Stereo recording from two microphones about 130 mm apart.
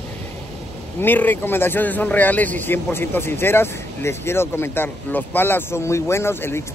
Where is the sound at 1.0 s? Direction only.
15° left (ahead or behind).